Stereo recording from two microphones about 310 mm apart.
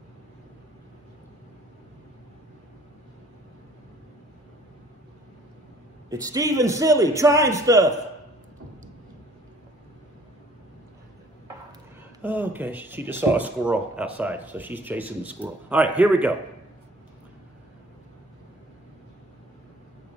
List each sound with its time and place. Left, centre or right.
6.0 s a man's voice: centre
12.2 s speech: centre